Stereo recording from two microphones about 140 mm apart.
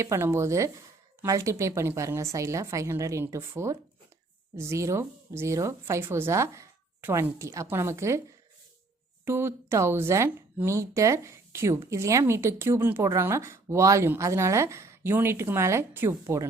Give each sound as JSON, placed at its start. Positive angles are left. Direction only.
{"t": 0.0, "sound": "speech", "side_deg": -20}
{"t": 9.2, "sound": "speech", "side_deg": -20}